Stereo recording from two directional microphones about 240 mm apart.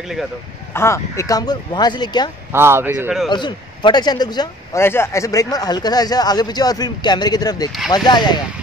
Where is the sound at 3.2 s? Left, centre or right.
Centre.